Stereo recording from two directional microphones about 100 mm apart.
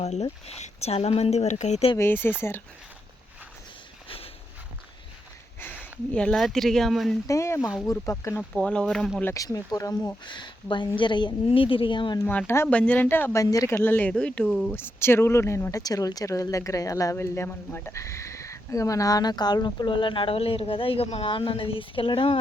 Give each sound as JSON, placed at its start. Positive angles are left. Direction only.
{"t": 0.0, "sound": "speech", "side_deg": 90}
{"t": 2.0, "sound": "speech", "side_deg": 20}
{"t": 6.1, "sound": "speech", "side_deg": 5}
{"t": 7.3, "sound": "speech", "side_deg": 30}
{"t": 8.4, "sound": "speech", "side_deg": 10}
{"t": 9.3, "sound": "speech", "side_deg": 35}
{"t": 10.2, "sound": "a woman's voice", "side_deg": 50}
{"t": 12.3, "sound": "speech", "side_deg": 15}
{"t": 13.3, "sound": "speech", "side_deg": 35}
{"t": 13.8, "sound": "speech", "side_deg": 20}
{"t": 14.7, "sound": "speech", "side_deg": 25}